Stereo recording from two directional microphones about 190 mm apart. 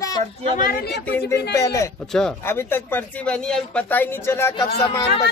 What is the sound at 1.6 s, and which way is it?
Speech, 15° left (ahead or behind).